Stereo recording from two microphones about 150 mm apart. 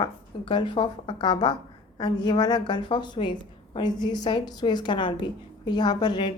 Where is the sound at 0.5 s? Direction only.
30° left (ahead or behind).